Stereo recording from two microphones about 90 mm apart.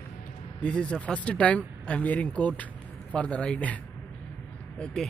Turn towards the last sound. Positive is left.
turn(degrees=10)  # may be behind; listen again after turning